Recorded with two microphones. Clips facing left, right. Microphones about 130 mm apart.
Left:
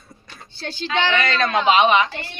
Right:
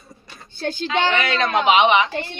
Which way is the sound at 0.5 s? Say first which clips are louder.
Right 7 dB; 50° right (ahead or behind).